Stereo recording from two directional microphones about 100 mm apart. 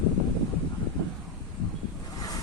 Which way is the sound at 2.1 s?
40° left (ahead or behind).